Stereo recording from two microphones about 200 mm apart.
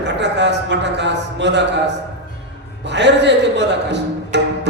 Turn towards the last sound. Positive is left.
turn(degrees=-60)  # may be behind; listen again after turning